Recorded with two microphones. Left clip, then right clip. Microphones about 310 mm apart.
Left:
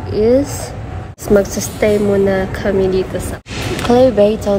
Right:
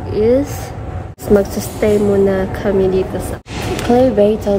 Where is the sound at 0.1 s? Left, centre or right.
Centre.